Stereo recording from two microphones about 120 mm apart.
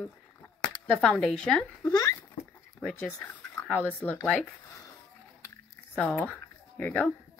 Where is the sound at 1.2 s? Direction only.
5° left (ahead or behind).